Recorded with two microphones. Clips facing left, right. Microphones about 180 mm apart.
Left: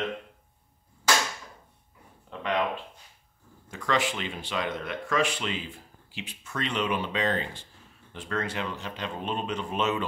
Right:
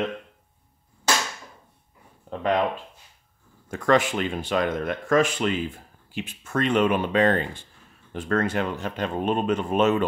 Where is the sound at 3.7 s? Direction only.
50° right (ahead or behind).